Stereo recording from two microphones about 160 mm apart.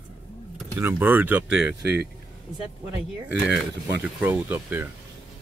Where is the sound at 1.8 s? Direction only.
90° right.